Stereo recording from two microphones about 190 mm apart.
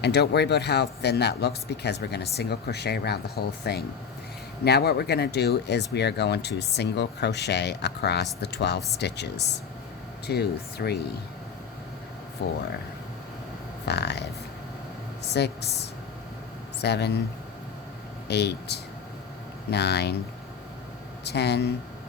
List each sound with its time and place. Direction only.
0.0 s speech: 60° left (ahead or behind)
12.4 s speech: 65° left (ahead or behind)
13.8 s speech: 60° left (ahead or behind)
16.8 s speech: 60° left (ahead or behind)
18.3 s speech: 60° left (ahead or behind)
21.2 s speech: 60° left (ahead or behind)